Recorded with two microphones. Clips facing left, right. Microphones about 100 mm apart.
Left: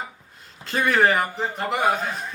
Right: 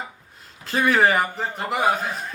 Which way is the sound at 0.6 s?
Centre (ahead or behind).